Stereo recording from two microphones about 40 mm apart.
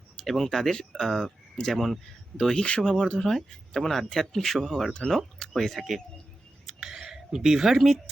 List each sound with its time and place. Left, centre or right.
0.3 s speech: centre
1.7 s speech: centre
2.6 s speech: left
3.2 s speech: centre
4.9 s speech: left
5.4 s speech: centre
6.7 s a sound: centre